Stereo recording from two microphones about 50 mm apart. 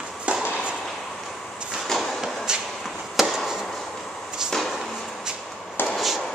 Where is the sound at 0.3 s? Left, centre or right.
Right.